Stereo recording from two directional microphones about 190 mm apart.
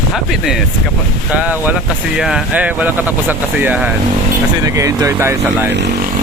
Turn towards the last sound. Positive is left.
turn(degrees=-15)  # may be behind; listen again after turning